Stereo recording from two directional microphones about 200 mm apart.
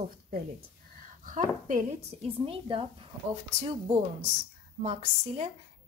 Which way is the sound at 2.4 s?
25° right (ahead or behind).